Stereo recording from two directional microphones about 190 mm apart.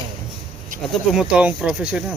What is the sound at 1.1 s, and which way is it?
Speech, 5° right (ahead or behind).